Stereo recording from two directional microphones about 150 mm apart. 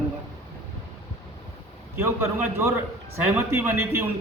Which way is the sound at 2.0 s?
15° right (ahead or behind).